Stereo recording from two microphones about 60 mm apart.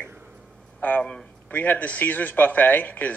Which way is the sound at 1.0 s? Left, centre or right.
Centre.